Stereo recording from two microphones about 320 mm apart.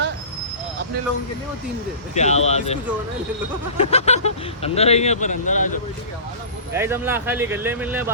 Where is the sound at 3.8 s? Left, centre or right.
Centre.